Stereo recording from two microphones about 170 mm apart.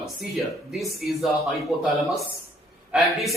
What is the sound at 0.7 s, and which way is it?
A man's voice, centre (ahead or behind).